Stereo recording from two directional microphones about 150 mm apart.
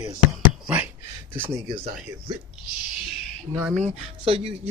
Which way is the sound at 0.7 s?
10° right (ahead or behind).